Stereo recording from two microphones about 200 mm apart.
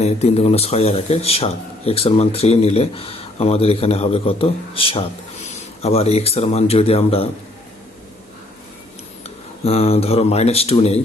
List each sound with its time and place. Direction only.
0.0 s speech: 30° left (ahead or behind)
9.2 s speech: 30° left (ahead or behind)